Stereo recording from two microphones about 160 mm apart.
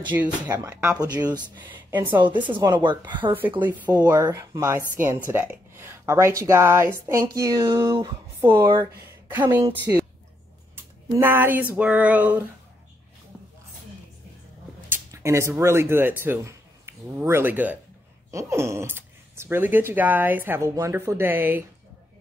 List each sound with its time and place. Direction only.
0.1 s speech: 10° right (ahead or behind)
0.9 s speech: 25° right (ahead or behind)
10.8 s a sound: 15° right (ahead or behind)
11.7 s speech: 10° right (ahead or behind)
14.9 s speech: 15° right (ahead or behind)